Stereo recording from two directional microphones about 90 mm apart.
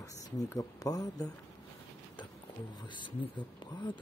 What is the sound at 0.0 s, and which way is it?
Speech, 40° left (ahead or behind).